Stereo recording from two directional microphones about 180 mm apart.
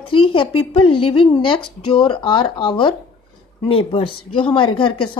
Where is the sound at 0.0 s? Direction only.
30° left (ahead or behind).